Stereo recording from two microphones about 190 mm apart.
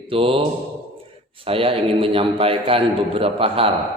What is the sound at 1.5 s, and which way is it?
A man's voice, 30° right (ahead or behind).